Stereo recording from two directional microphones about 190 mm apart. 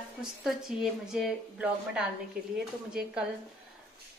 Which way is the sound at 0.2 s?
5° right (ahead or behind).